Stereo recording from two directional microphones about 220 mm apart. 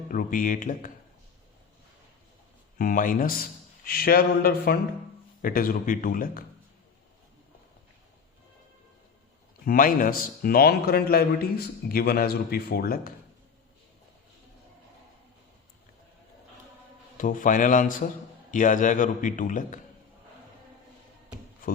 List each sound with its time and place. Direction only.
0.1 s a man's voice: 40° left (ahead or behind)
2.7 s a man's voice: 40° left (ahead or behind)
9.6 s a man's voice: 40° left (ahead or behind)
17.2 s a man's voice: 35° left (ahead or behind)